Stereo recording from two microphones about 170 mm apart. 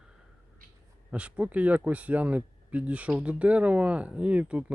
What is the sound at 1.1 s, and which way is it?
Speech, 10° right (ahead or behind).